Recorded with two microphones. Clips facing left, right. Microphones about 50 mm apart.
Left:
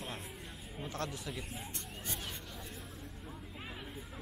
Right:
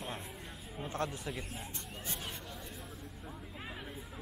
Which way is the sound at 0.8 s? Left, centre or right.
Right.